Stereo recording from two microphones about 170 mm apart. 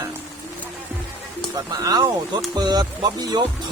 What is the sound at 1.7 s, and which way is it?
Speech, 25° right (ahead or behind).